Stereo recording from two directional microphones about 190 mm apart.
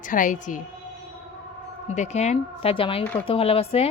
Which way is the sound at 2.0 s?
35° left (ahead or behind).